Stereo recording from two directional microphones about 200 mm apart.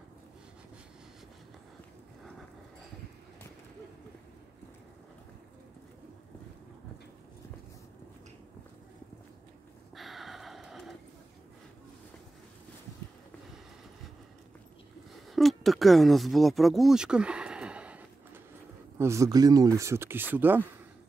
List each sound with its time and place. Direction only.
9.9 s gasp: centre (ahead or behind)
15.3 s a sound: centre (ahead or behind)
18.9 s speech: 15° right (ahead or behind)